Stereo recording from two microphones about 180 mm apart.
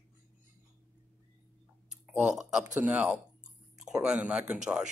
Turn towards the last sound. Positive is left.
turn(degrees=-5)  # may be behind; listen again after turning